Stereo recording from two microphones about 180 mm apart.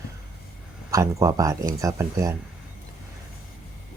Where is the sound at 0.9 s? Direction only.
20° right (ahead or behind).